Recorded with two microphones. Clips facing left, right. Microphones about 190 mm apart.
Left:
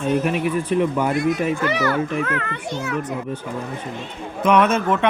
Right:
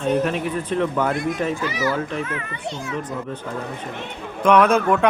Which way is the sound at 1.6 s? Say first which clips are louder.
Left 3 dB; 65° left (ahead or behind).